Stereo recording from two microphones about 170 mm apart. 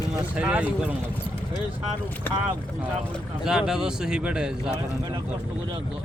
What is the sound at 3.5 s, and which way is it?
Speech, 5° right (ahead or behind).